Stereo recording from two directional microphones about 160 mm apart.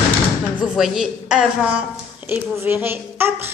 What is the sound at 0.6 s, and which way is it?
Speech, 5° right (ahead or behind).